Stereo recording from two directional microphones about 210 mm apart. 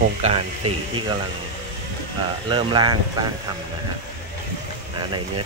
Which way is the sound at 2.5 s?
20° right (ahead or behind).